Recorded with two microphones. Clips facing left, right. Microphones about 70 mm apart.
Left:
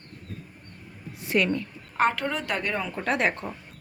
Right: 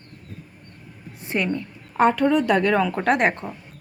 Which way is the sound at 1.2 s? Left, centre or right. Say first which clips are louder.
Even; right.